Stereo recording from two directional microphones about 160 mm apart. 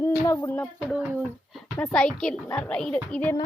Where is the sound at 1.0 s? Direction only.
5° right (ahead or behind).